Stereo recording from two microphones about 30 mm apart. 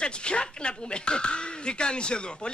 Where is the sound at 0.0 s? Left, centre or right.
Left.